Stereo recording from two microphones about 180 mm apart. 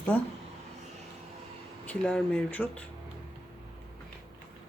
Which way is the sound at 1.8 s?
5° left (ahead or behind).